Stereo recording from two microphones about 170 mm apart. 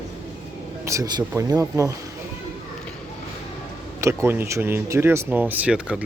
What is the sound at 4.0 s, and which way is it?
Speech, 15° right (ahead or behind).